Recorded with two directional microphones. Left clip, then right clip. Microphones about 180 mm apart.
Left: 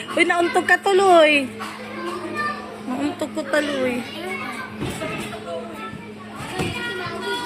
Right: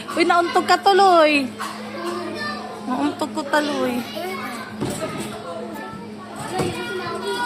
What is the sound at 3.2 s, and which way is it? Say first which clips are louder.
Speech: left 1 dB; 10° right (ahead or behind).